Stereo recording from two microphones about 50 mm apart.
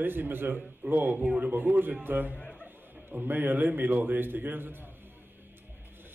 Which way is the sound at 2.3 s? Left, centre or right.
Left.